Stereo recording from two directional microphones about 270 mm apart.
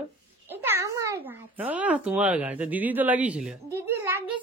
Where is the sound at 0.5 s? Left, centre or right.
Centre.